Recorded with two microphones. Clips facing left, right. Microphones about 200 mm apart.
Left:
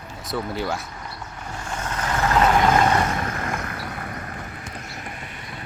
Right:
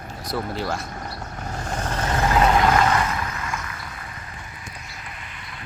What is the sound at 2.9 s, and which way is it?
Vehicle, 40° left (ahead or behind).